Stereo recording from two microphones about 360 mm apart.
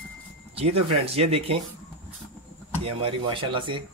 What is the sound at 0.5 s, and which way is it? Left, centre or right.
Speech, centre.